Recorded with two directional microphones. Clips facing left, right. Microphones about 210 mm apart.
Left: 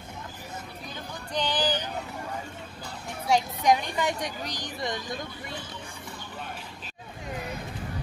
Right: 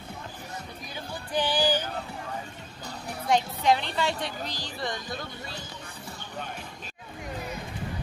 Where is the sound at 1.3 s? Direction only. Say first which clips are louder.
Right 2 dB; 10° right (ahead or behind).